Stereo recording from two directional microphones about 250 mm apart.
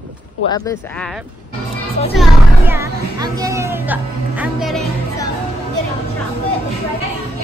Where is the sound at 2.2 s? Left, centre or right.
Centre.